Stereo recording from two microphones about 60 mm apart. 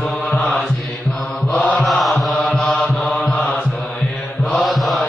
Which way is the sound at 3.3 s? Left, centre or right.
Centre.